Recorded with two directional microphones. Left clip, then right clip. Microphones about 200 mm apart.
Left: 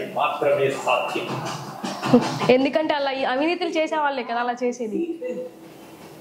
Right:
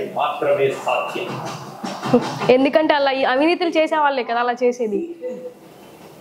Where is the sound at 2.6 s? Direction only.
60° right (ahead or behind).